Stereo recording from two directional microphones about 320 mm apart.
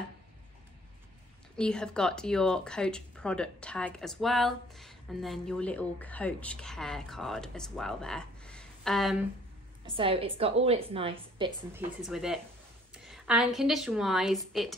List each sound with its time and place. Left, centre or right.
1.6 s speech: centre
9.8 s a woman's voice: centre
12.0 s a woman's voice: centre